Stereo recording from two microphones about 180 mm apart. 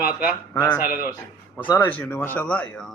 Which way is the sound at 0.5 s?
10° left (ahead or behind).